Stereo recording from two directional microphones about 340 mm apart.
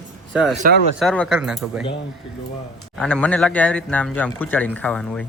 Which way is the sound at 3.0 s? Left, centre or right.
Centre.